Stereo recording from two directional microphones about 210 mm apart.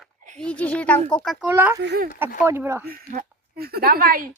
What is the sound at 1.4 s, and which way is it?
Speech, 10° right (ahead or behind).